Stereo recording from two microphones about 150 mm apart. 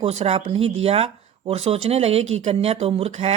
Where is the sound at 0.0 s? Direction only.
45° right (ahead or behind).